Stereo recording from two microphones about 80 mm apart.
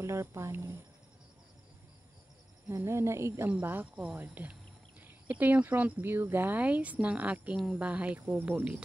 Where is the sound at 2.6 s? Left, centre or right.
Right.